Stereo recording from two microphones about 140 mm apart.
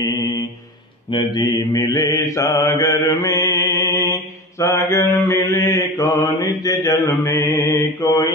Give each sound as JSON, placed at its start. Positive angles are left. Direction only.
{"t": 1.1, "sound": "mantra", "side_deg": 25}